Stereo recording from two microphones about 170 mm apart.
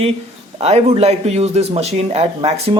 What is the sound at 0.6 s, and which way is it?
Speech, 40° right (ahead or behind).